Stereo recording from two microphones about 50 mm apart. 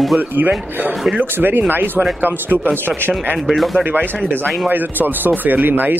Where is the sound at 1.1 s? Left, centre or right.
Right.